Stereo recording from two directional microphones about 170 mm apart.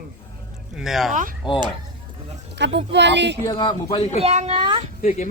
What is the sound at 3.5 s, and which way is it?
Speech, 25° left (ahead or behind).